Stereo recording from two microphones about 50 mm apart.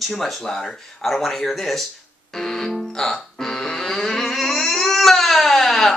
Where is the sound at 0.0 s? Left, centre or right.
Centre.